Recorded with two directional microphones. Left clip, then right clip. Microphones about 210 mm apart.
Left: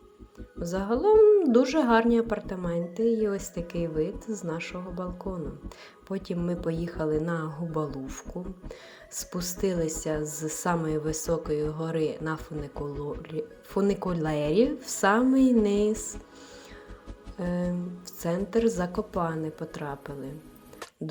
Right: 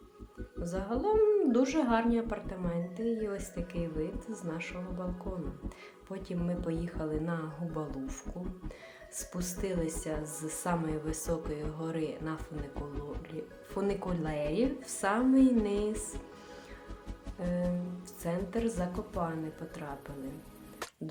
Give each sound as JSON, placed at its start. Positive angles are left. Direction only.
{"t": 0.6, "sound": "a woman's voice", "side_deg": 30}
{"t": 17.4, "sound": "a woman's voice", "side_deg": 30}